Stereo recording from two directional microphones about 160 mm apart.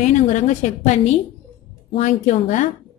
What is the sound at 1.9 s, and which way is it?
Speech, 45° left (ahead or behind).